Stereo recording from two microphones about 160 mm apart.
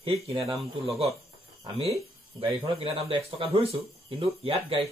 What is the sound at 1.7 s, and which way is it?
Speech, 40° right (ahead or behind).